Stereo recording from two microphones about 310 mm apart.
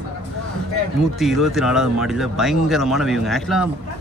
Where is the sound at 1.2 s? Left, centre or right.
Centre.